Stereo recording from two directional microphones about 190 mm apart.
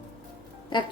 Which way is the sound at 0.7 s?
25° left (ahead or behind).